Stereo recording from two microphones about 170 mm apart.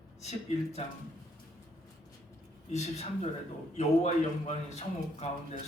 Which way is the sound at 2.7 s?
40° left (ahead or behind).